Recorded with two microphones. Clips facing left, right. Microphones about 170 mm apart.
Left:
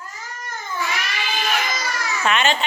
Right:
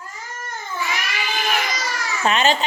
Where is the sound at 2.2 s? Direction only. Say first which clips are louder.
Right 2 dB; 35° right (ahead or behind).